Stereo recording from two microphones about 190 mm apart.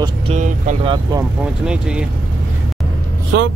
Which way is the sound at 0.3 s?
40° right (ahead or behind).